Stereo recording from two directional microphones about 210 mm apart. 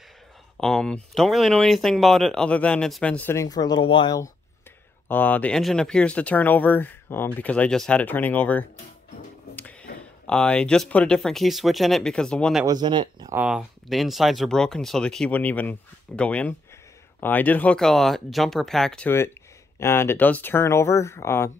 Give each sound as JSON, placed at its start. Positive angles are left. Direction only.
{"t": 0.6, "sound": "speech", "side_deg": 5}
{"t": 9.6, "sound": "a sound", "side_deg": 5}
{"t": 10.2, "sound": "speech", "side_deg": 5}
{"t": 12.6, "sound": "speech", "side_deg": -20}
{"t": 13.4, "sound": "speech", "side_deg": -5}